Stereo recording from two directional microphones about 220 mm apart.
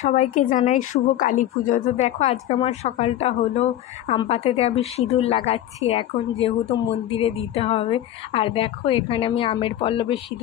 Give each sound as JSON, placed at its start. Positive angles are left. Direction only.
{"t": 0.0, "sound": "a woman's voice", "side_deg": 35}